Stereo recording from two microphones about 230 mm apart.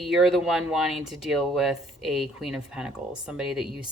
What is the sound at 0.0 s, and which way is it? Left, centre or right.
Speech, centre.